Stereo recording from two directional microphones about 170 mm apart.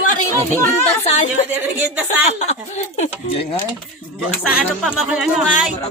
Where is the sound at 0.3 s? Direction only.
15° left (ahead or behind).